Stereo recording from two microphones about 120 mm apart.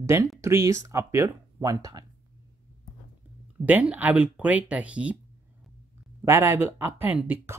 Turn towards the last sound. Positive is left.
turn(degrees=-15)  # may be behind; listen again after turning